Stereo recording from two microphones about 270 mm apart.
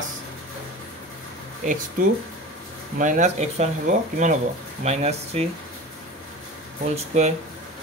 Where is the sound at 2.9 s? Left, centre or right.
Right.